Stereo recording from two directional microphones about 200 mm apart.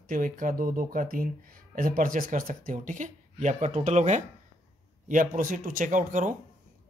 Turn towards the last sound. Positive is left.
turn(degrees=-40)  # may be behind; listen again after turning